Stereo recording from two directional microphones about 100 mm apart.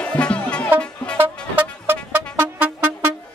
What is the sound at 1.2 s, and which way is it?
Music, 20° right (ahead or behind).